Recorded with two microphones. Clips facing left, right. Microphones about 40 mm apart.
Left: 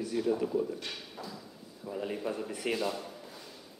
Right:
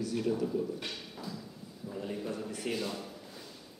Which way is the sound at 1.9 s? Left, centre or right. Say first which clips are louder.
Left 3 dB; centre.